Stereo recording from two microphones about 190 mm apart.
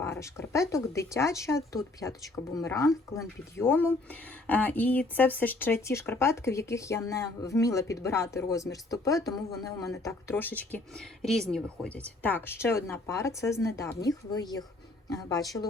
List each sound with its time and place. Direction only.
0.0 s speech: 15° left (ahead or behind)